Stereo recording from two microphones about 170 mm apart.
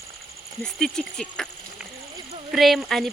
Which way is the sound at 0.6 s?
Centre (ahead or behind).